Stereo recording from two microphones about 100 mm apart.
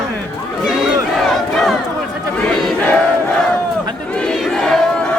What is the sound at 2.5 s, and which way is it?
Battle cry, 10° left (ahead or behind).